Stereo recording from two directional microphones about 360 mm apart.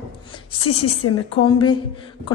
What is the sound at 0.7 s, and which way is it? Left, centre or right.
Speech, left.